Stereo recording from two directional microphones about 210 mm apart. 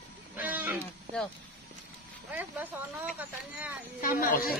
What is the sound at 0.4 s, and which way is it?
Wild animals, 10° right (ahead or behind).